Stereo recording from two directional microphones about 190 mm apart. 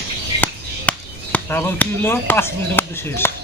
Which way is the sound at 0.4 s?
10° left (ahead or behind).